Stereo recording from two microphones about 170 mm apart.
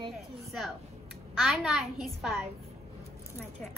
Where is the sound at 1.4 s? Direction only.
Centre (ahead or behind).